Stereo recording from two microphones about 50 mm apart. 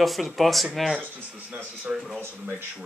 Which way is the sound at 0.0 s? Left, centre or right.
Centre.